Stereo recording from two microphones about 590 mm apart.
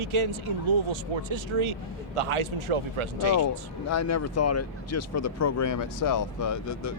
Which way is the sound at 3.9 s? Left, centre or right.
Left.